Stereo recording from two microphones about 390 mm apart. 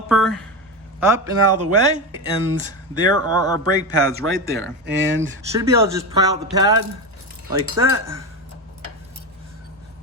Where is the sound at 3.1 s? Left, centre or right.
Right.